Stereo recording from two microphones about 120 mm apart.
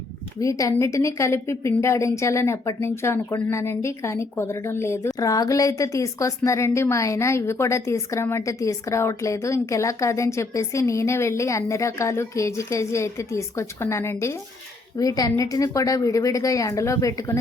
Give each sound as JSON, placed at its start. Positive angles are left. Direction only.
{"t": 0.4, "sound": "a woman's voice", "side_deg": 25}